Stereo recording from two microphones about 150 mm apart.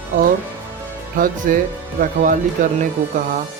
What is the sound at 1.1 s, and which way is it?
Speech, 65° right (ahead or behind).